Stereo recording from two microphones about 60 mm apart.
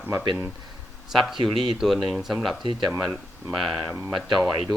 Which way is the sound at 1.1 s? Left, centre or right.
Centre.